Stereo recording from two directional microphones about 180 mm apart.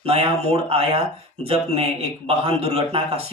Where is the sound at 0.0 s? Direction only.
35° right (ahead or behind).